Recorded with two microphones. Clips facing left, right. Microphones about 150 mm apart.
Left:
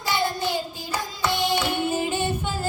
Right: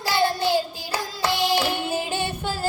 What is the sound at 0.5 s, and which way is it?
Child singing, 30° right (ahead or behind).